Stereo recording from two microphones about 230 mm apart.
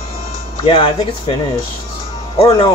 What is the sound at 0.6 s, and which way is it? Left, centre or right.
Speech, left.